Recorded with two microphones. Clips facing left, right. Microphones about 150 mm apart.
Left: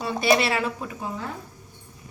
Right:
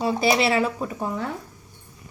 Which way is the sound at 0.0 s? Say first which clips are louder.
Right 1 dB; 30° right (ahead or behind).